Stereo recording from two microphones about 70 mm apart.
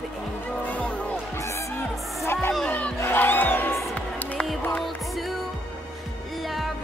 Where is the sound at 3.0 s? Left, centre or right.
Left.